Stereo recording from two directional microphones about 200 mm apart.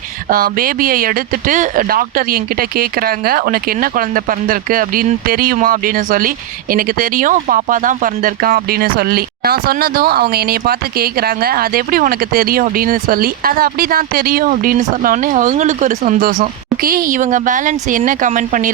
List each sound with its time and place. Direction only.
0.3 s speech: 45° right (ahead or behind)